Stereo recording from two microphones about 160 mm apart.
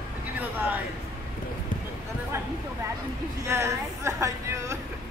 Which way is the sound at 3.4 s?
20° right (ahead or behind).